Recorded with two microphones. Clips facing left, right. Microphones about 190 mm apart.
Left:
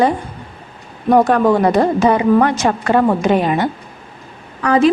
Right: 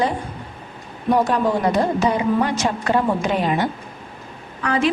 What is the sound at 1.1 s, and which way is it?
Speech, 60° left (ahead or behind).